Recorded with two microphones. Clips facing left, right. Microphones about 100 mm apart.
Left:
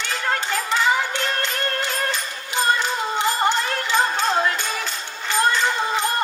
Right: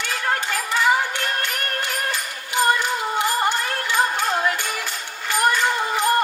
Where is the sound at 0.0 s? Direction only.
20° left (ahead or behind).